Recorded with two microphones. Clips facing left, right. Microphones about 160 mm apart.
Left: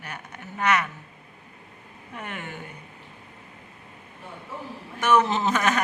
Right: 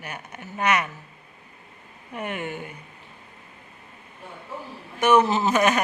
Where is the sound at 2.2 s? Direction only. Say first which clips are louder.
Right 6 dB; 15° right (ahead or behind).